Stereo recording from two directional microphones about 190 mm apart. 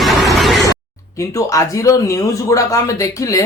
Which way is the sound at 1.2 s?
15° left (ahead or behind).